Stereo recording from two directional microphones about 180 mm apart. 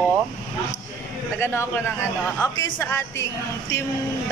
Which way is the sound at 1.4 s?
15° left (ahead or behind).